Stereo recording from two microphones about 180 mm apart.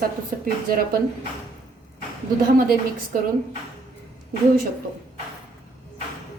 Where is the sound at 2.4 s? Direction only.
50° right (ahead or behind).